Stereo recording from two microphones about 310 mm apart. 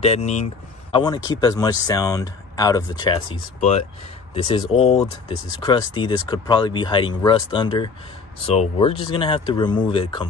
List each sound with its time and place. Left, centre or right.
0.0 s speech: centre
4.3 s speech: centre